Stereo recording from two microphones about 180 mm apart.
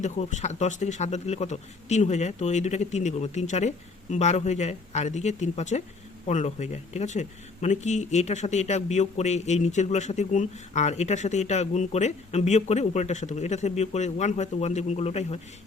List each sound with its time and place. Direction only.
0.0 s speech: 40° left (ahead or behind)